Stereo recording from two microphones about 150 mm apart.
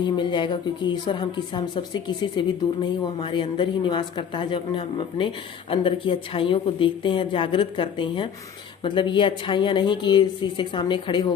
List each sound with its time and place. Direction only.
0.0 s a woman's voice: 30° left (ahead or behind)